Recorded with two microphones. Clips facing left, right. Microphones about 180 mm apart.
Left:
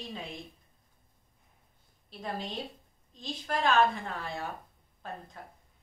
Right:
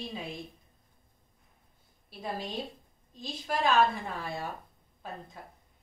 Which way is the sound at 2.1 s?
5° right (ahead or behind).